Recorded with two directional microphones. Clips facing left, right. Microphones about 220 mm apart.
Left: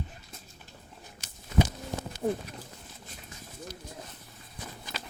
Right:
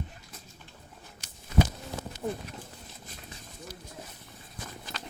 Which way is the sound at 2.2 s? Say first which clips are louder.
Left 4 dB; 35° left (ahead or behind).